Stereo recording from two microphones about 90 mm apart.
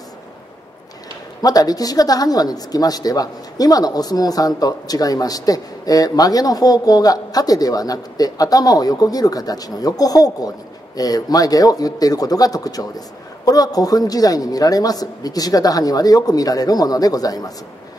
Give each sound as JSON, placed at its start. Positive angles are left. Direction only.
{"t": 1.4, "sound": "speech", "side_deg": 45}